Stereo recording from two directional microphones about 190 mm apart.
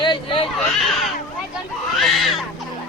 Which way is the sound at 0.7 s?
Centre (ahead or behind).